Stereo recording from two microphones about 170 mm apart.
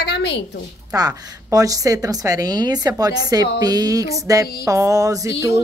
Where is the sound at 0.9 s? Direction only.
20° right (ahead or behind).